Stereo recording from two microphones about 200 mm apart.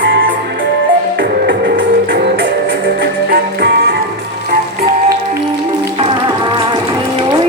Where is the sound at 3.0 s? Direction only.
55° right (ahead or behind).